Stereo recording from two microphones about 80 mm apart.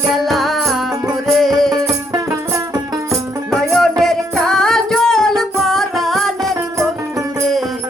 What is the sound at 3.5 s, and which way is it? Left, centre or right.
Music, centre.